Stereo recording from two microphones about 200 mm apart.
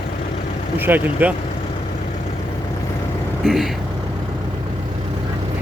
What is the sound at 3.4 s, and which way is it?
Speech, centre (ahead or behind).